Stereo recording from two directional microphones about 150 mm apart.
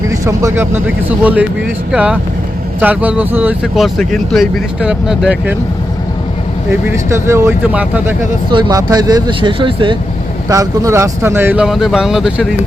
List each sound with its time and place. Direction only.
0.1 s speech: 20° right (ahead or behind)
3.8 s speech: centre (ahead or behind)
6.7 s speech: 15° right (ahead or behind)
8.4 s speech: 30° right (ahead or behind)
10.5 s speech: 20° right (ahead or behind)
11.6 s speech: centre (ahead or behind)